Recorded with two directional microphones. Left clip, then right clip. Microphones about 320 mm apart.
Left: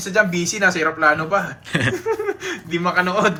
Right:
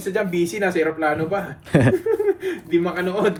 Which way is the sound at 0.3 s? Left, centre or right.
Left.